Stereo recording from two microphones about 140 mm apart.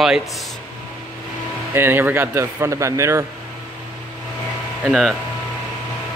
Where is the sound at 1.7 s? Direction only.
15° right (ahead or behind).